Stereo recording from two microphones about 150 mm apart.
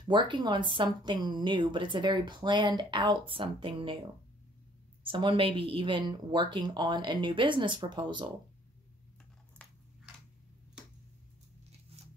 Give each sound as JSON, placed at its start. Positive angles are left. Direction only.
{"t": 0.0, "sound": "speech", "side_deg": -30}
{"t": 5.0, "sound": "speech", "side_deg": -35}
{"t": 9.6, "sound": "biting", "side_deg": 10}